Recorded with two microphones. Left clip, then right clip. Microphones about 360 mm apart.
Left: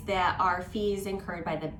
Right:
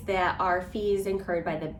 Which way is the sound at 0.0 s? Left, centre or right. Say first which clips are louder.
Even; centre.